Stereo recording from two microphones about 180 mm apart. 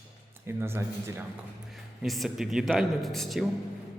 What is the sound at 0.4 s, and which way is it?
Speech, 15° right (ahead or behind).